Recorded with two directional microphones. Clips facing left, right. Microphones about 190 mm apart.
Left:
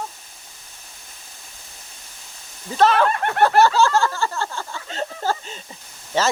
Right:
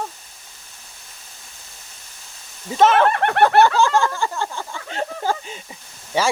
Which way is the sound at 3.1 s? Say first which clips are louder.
Right 3 dB; 65° right (ahead or behind).